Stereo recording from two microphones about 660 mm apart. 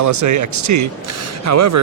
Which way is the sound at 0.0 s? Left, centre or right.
Right.